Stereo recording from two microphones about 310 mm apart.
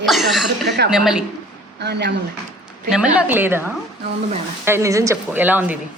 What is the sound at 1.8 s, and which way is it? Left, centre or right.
Speech, right.